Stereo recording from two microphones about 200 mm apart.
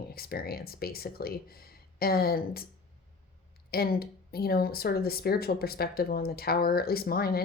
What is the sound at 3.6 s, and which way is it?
A woman's voice, 50° left (ahead or behind).